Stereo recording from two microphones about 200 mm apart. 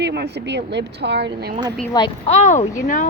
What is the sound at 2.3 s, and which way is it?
Speech, 35° left (ahead or behind).